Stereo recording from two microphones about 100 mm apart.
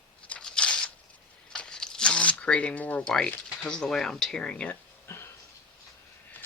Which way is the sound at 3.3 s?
10° left (ahead or behind).